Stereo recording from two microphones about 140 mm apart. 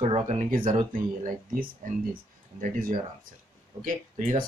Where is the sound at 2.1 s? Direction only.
85° right.